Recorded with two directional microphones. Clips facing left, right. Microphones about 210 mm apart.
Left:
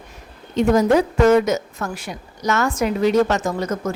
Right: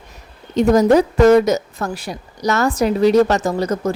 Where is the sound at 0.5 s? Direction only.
40° right (ahead or behind).